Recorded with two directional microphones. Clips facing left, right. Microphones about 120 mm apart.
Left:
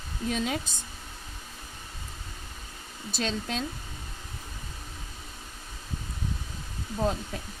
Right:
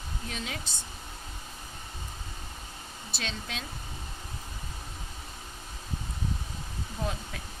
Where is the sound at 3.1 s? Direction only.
40° left (ahead or behind).